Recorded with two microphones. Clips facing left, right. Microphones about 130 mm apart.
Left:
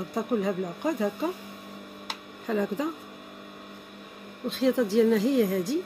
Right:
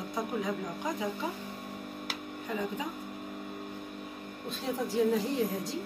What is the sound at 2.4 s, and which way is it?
Speech, 65° left (ahead or behind).